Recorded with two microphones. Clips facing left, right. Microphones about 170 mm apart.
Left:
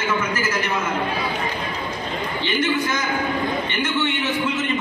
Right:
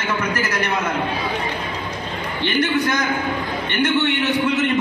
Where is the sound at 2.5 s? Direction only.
65° right (ahead or behind).